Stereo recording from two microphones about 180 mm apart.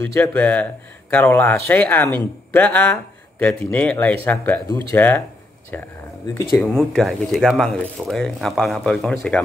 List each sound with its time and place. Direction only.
0.0 s speech: 10° left (ahead or behind)